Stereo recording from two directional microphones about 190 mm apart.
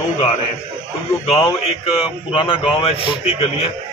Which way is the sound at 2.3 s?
25° left (ahead or behind).